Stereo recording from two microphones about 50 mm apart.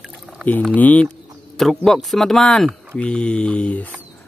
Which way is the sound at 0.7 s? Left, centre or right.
Left.